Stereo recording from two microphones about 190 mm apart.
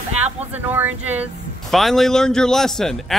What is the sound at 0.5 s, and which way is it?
A man's voice, 10° right (ahead or behind).